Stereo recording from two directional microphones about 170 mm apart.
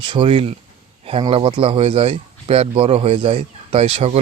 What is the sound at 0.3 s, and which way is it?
Speech, 40° right (ahead or behind).